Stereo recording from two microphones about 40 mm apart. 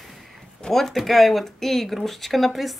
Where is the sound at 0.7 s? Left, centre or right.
Centre.